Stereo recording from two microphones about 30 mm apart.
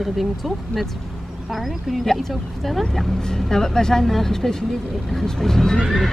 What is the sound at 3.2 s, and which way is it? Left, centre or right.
Speech, centre.